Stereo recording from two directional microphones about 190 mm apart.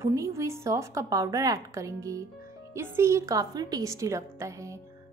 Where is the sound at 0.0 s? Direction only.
15° right (ahead or behind).